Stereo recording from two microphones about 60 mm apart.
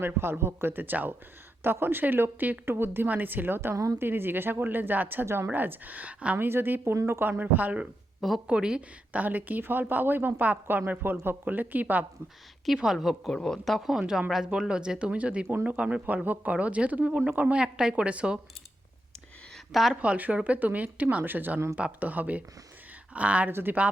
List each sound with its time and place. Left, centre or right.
0.0 s speech: right
5.5 s speech: right
6.3 s speech: right
8.4 s speech: centre
9.2 s speech: right
12.6 s a woman's voice: centre
19.7 s a woman's voice: centre
20.0 s speech: right
23.5 s speech: right